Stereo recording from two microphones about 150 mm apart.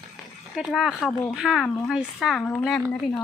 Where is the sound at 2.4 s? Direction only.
15° left (ahead or behind).